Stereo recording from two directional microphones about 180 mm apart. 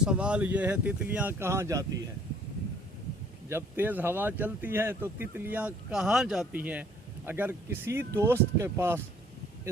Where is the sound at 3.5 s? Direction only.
10° right (ahead or behind).